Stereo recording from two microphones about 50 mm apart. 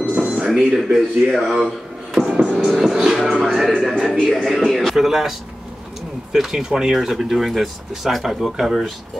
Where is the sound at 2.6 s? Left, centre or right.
Centre.